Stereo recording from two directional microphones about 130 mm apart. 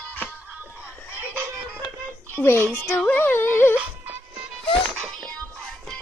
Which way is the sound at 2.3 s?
15° left (ahead or behind).